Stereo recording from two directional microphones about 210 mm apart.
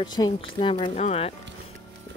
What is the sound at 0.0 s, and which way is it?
Speech, 20° left (ahead or behind).